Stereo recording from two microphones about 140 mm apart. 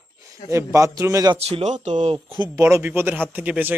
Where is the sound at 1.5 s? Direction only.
55° right (ahead or behind).